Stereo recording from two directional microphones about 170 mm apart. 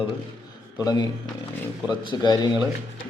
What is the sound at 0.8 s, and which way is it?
Speech, 25° left (ahead or behind).